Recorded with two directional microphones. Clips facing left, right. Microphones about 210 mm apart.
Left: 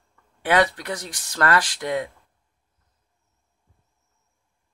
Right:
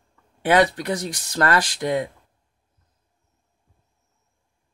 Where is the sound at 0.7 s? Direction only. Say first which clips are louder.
Right 6 dB; 40° right (ahead or behind).